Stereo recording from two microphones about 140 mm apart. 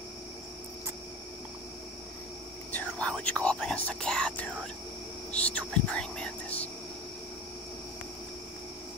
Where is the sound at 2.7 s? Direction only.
10° left (ahead or behind).